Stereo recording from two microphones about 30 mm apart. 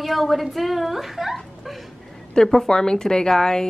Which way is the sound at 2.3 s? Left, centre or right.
Centre.